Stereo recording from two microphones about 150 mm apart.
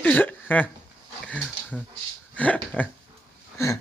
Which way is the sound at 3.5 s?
20° left (ahead or behind).